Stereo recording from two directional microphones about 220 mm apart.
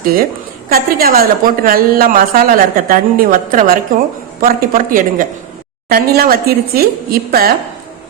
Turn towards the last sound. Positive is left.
turn(degrees=-45)  # may be behind; listen again after turning